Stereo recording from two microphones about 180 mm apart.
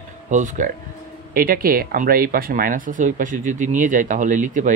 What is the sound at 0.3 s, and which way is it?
Speech, 45° right (ahead or behind).